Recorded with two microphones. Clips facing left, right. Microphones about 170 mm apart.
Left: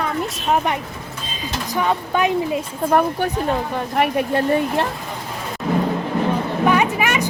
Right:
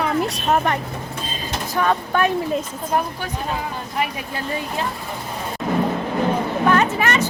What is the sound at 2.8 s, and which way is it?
Speech, 60° left (ahead or behind).